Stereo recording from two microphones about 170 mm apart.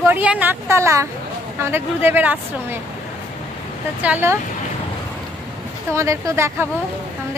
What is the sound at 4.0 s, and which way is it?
Speech, 10° right (ahead or behind).